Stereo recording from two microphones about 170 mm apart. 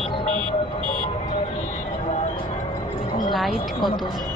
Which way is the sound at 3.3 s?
Centre (ahead or behind).